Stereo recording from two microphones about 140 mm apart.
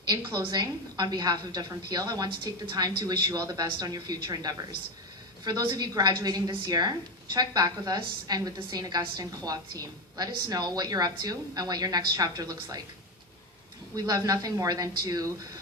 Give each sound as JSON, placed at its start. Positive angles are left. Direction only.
{"t": 0.3, "sound": "a woman's voice", "side_deg": -30}
{"t": 13.9, "sound": "a woman's voice", "side_deg": -25}